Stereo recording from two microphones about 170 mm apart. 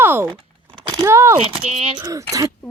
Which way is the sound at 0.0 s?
15° right (ahead or behind).